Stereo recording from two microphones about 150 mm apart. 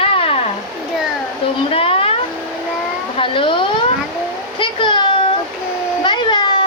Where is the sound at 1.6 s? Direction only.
40° left (ahead or behind).